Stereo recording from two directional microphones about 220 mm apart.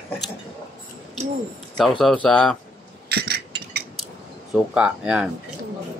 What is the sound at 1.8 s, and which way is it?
Speech, centre (ahead or behind).